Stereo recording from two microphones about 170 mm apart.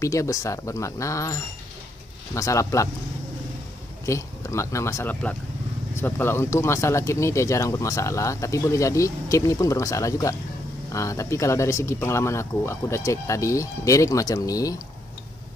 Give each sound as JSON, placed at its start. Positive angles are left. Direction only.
{"t": 0.0, "sound": "speech", "side_deg": 20}
{"t": 4.0, "sound": "speech", "side_deg": 15}